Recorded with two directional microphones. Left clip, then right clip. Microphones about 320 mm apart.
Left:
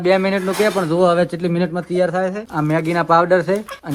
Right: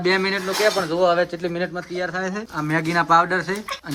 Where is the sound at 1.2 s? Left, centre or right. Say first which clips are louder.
Left 4 dB; centre.